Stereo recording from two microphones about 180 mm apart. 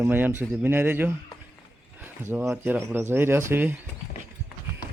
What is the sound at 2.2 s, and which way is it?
Speech, 10° right (ahead or behind).